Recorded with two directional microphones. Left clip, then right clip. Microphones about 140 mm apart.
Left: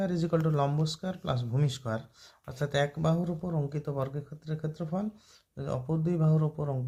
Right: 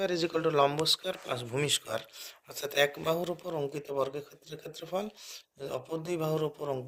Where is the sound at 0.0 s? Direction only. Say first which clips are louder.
Right 1 dB; 30° right (ahead or behind).